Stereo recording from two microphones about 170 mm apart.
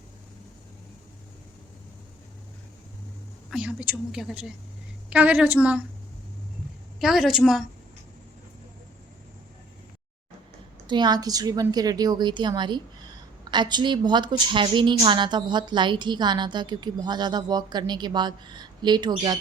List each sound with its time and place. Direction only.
3.5 s a woman's voice: 5° right (ahead or behind)
7.0 s a woman's voice: centre (ahead or behind)
10.8 s a woman's voice: 25° right (ahead or behind)